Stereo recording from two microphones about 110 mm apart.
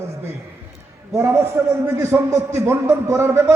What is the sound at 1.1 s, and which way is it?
A man's voice, 25° right (ahead or behind).